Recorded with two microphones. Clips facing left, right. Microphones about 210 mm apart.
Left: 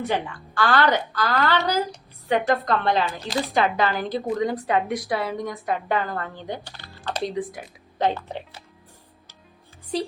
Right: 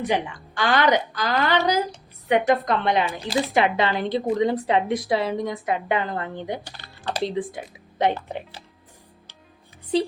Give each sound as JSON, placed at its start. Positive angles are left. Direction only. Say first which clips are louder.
{"t": 0.0, "sound": "a woman's voice", "louder": "right 2 dB", "side_deg": -15}